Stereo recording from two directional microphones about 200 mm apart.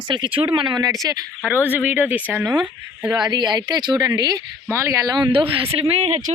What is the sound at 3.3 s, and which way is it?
Speech, 20° right (ahead or behind).